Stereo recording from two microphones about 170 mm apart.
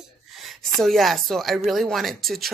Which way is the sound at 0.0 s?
Centre (ahead or behind).